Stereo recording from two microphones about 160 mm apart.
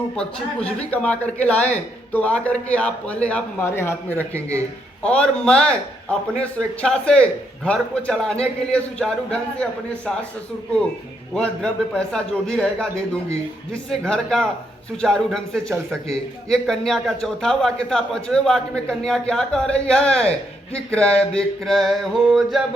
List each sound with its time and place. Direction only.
0.2 s a man's voice: 5° left (ahead or behind)
4.4 s speech: 15° right (ahead or behind)
5.0 s a man's voice: 5° left (ahead or behind)
6.8 s a man's voice: 5° left (ahead or behind)
11.3 s a man's voice: 5° left (ahead or behind)
14.0 s a man's voice: 5° left (ahead or behind)